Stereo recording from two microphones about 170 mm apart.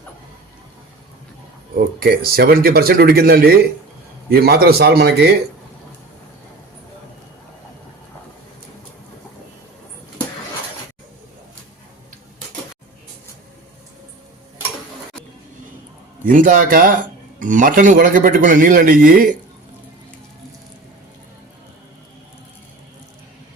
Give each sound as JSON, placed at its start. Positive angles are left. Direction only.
{"t": 2.0, "sound": "a man's voice", "side_deg": -60}
{"t": 16.2, "sound": "a man's voice", "side_deg": -55}